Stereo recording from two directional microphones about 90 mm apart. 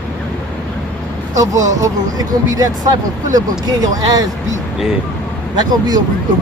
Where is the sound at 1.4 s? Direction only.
40° right (ahead or behind).